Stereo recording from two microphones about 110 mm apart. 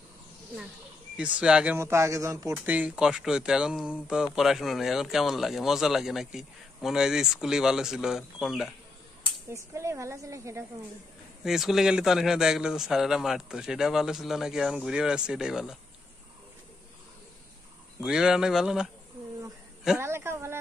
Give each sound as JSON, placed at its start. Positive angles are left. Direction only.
{"t": 1.1, "sound": "speech", "side_deg": -10}
{"t": 1.8, "sound": "a woman's voice", "side_deg": -25}
{"t": 2.5, "sound": "speech", "side_deg": -15}
{"t": 9.5, "sound": "a woman's voice", "side_deg": -25}
{"t": 11.4, "sound": "speech", "side_deg": -5}
{"t": 18.0, "sound": "speech", "side_deg": -5}
{"t": 20.0, "sound": "a sound", "side_deg": -25}